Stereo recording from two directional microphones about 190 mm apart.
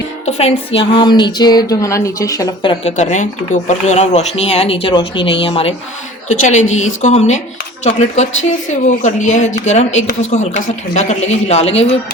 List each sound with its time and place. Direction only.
0.3 s a sound: 35° left (ahead or behind)
0.8 s speech: 25° left (ahead or behind)
2.9 s speech: 40° left (ahead or behind)